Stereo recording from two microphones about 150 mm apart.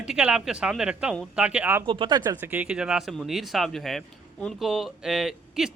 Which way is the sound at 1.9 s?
30° right (ahead or behind).